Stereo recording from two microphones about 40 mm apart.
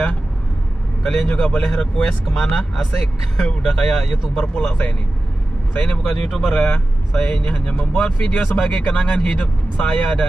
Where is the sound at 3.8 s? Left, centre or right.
Centre.